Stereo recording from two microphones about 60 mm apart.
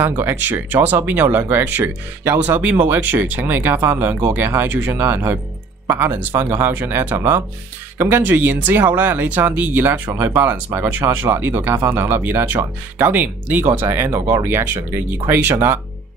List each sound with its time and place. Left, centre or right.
0.2 s speech: right
4.9 s speech: right